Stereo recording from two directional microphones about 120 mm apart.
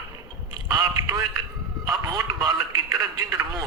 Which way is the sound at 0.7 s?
30° right (ahead or behind).